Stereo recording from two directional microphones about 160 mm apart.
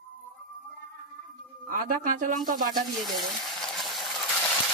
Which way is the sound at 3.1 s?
Centre (ahead or behind).